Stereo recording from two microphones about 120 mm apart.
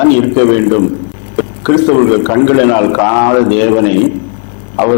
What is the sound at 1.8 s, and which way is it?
A man's voice, 25° left (ahead or behind).